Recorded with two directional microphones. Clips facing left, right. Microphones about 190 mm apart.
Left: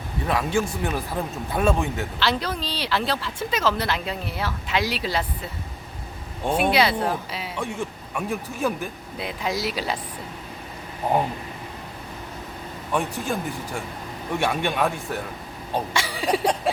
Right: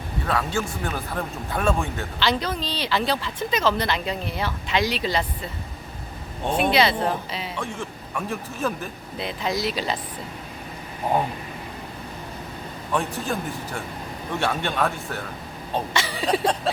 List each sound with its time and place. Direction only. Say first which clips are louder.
0.3 s speech: left 2 dB; 15° left (ahead or behind)
2.1 s speech: right 2 dB; centre (ahead or behind)
6.5 s speech: even; 10° left (ahead or behind)
12.9 s speech: even; 15° left (ahead or behind)